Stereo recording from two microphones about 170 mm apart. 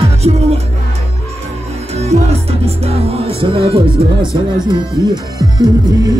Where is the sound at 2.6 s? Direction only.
35° right (ahead or behind).